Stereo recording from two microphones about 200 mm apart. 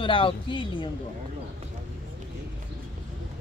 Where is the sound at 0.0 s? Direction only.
25° left (ahead or behind).